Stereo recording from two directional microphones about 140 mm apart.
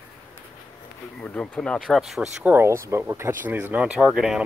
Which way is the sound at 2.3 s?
15° right (ahead or behind).